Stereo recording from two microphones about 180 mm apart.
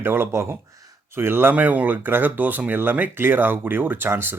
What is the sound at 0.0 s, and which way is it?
A man's voice, 10° right (ahead or behind).